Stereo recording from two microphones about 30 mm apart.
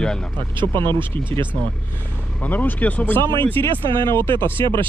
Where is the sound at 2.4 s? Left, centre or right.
Left.